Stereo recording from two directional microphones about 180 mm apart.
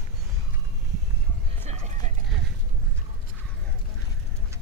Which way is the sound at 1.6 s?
40° right (ahead or behind).